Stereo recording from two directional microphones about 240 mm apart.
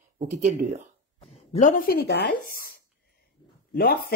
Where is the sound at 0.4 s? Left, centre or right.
Right.